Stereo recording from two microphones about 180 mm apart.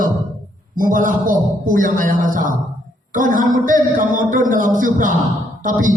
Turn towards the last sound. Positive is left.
turn(degrees=-45)  # may be behind; listen again after turning